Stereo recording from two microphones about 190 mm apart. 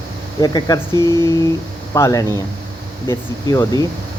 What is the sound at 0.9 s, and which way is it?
Speech, 20° right (ahead or behind).